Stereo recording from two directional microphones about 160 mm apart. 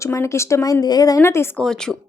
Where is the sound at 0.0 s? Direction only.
15° left (ahead or behind).